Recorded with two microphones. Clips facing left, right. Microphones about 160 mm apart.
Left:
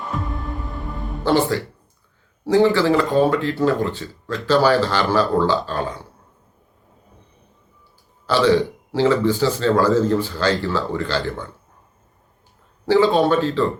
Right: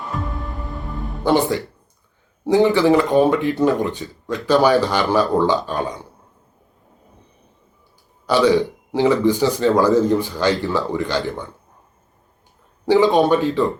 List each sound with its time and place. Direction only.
0.1 s music: centre (ahead or behind)
1.2 s speech: 20° right (ahead or behind)
8.3 s speech: 15° right (ahead or behind)
12.8 s speech: 15° right (ahead or behind)